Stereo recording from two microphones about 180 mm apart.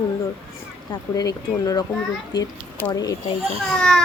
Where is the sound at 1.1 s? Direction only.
20° left (ahead or behind).